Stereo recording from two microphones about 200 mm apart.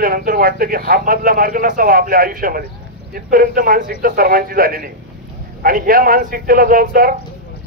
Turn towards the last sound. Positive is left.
turn(degrees=-45)  # may be behind; listen again after turning